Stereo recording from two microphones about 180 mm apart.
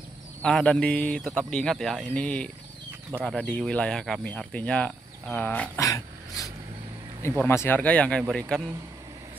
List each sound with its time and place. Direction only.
0.4 s speech: 5° left (ahead or behind)
5.9 s dog: 20° left (ahead or behind)
7.3 s speech: 15° left (ahead or behind)